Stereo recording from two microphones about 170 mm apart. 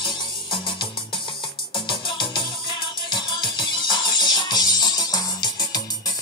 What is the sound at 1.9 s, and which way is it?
Music, 30° left (ahead or behind).